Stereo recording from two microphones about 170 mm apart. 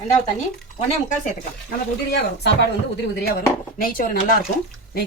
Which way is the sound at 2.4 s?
85° left.